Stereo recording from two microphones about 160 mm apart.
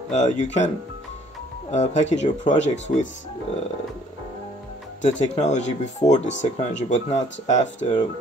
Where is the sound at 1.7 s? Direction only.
50° left (ahead or behind).